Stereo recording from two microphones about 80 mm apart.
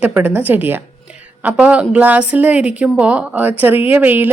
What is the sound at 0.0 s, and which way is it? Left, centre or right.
A woman's voice, right.